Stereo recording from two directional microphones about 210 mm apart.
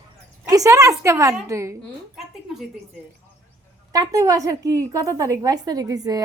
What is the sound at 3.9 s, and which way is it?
A woman's voice, 15° right (ahead or behind).